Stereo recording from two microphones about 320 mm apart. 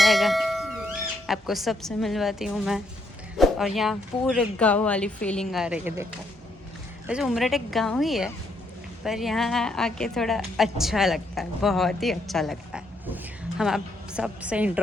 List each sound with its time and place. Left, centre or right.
0.0 s speech: centre
3.3 s a sound: centre
3.8 s a woman's voice: centre
7.1 s a woman's voice: centre